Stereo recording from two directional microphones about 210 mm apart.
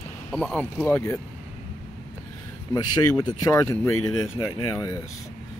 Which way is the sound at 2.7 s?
20° left (ahead or behind).